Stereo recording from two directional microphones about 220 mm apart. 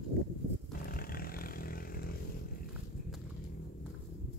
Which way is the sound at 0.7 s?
40° left (ahead or behind).